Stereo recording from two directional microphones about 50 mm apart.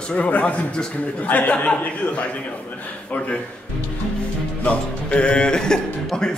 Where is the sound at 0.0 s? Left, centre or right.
Left.